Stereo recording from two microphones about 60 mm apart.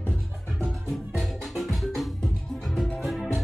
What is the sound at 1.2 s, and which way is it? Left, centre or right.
Music, centre.